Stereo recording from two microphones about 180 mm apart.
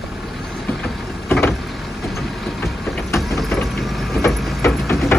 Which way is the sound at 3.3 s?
Centre (ahead or behind).